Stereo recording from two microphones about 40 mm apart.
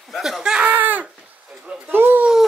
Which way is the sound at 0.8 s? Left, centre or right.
Right.